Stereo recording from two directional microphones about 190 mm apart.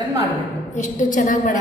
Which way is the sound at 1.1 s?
45° left (ahead or behind).